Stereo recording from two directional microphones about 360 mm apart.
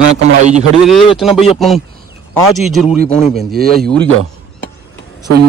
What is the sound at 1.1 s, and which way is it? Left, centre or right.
Speech, centre.